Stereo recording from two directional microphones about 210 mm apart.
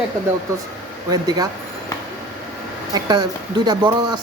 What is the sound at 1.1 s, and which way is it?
Speech, 15° right (ahead or behind).